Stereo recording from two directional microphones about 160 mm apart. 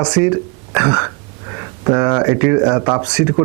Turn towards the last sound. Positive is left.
turn(degrees=-10)  # may be behind; listen again after turning